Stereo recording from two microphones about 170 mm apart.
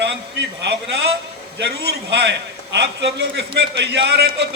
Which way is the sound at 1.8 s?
90° right.